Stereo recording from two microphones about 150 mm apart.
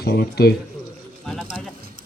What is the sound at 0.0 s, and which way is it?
Speech, 90° left.